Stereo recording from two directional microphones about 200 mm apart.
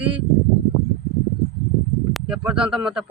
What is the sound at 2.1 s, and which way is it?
Speech, 5° right (ahead or behind).